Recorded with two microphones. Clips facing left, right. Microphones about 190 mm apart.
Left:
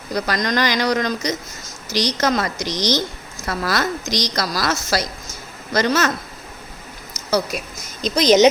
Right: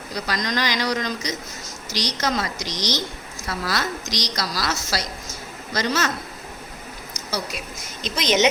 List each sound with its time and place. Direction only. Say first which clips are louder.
0.1 s a woman's voice: left 5 dB; 55° left (ahead or behind)
8.0 s speech: left 7 dB; 40° left (ahead or behind)